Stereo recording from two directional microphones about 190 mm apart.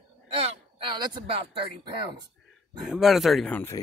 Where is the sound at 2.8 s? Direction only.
Centre (ahead or behind).